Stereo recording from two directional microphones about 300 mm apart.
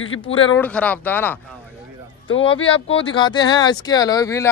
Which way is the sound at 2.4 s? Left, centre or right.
Centre.